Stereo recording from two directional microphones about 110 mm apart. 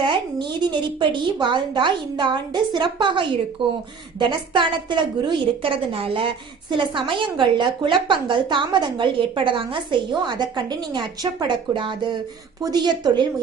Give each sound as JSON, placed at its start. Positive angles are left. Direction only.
{"t": 0.0, "sound": "a woman's voice", "side_deg": -45}